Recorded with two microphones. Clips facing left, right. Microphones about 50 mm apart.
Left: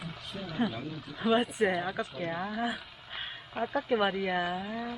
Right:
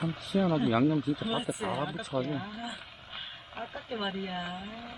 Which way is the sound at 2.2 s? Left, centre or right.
Left.